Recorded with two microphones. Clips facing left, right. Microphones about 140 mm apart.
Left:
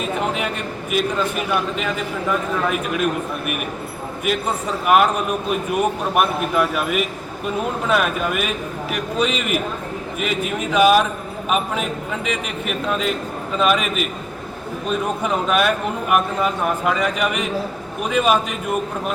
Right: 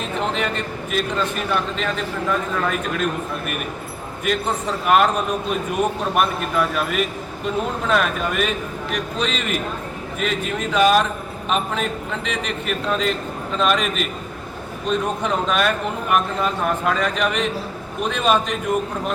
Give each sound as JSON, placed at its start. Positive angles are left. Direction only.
{"t": 0.0, "sound": "a man's voice", "side_deg": 10}